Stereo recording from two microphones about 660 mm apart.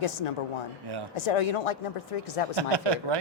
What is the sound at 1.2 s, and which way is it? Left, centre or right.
Speech, left.